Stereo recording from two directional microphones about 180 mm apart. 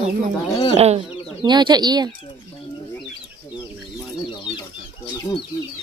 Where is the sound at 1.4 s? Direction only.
25° right (ahead or behind).